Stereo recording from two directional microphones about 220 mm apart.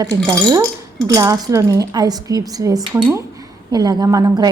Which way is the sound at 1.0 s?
15° right (ahead or behind).